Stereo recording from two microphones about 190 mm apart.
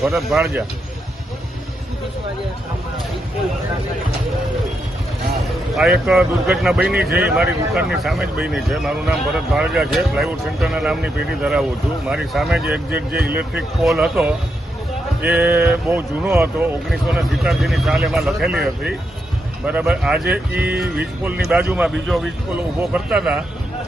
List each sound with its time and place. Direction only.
0.0 s speech: centre (ahead or behind)
5.7 s speech: 5° right (ahead or behind)
6.9 s speech: 55° right (ahead or behind)
7.3 s speech: 5° right (ahead or behind)